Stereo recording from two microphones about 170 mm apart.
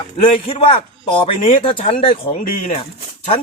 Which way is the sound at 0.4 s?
35° left (ahead or behind).